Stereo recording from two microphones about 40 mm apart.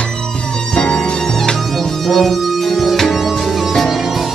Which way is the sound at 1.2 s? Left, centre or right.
Centre.